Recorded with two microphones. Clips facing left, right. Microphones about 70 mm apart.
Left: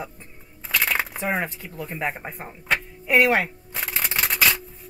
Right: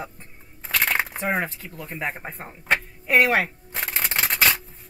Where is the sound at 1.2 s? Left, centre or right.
Centre.